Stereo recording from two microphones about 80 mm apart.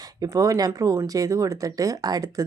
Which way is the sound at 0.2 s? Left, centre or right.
Right.